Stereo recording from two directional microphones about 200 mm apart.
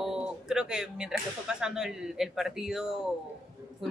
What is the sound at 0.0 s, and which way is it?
Speech, 5° right (ahead or behind).